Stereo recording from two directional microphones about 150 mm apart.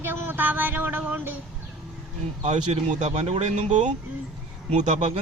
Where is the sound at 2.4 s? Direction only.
45° right (ahead or behind).